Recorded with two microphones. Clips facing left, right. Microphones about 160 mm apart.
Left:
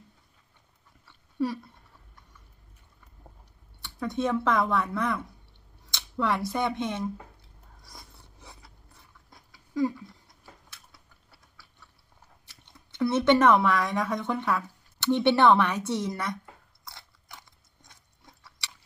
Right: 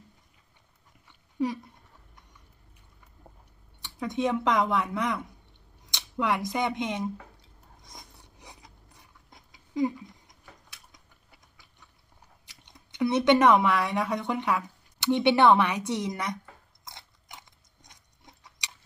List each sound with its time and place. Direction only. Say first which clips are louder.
1.0 s dog: even; 15° right (ahead or behind)
3.8 s speech: even; 15° right (ahead or behind)
7.8 s a sound: right 1 dB; 20° right (ahead or behind)
12.5 s speech: even; 15° right (ahead or behind)
16.8 s biting: even; 20° right (ahead or behind)
17.8 s a sound: right 1 dB; 20° right (ahead or behind)